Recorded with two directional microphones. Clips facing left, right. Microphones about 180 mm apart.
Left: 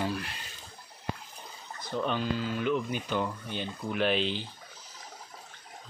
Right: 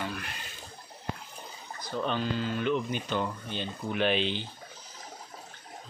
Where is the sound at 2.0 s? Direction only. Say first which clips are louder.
Even; 10° left (ahead or behind).